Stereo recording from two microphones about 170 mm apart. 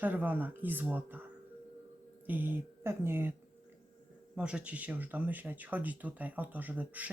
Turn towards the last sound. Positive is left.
turn(degrees=-10)  # may be behind; listen again after turning